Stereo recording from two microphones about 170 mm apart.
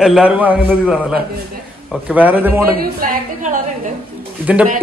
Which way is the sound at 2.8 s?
55° right (ahead or behind).